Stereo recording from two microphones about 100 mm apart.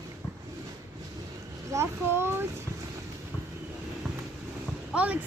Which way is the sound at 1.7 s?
25° right (ahead or behind).